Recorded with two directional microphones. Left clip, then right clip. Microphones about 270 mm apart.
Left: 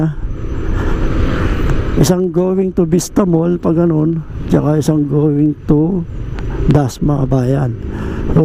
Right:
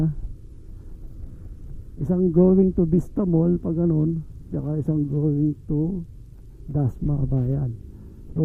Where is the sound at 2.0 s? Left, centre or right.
Centre.